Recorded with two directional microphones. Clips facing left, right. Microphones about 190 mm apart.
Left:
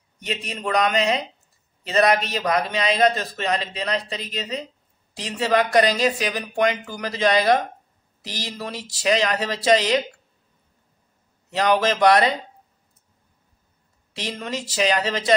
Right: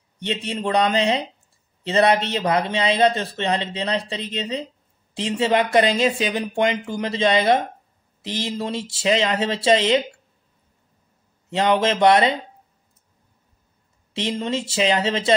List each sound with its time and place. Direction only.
0.2 s a man's voice: 30° right (ahead or behind)
11.5 s a man's voice: 25° right (ahead or behind)
14.1 s a man's voice: 25° right (ahead or behind)